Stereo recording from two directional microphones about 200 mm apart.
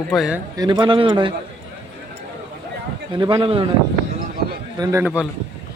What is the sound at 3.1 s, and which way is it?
Speech, 25° right (ahead or behind).